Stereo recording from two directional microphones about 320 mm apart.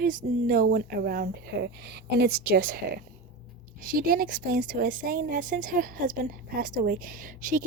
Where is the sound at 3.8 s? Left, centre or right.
Right.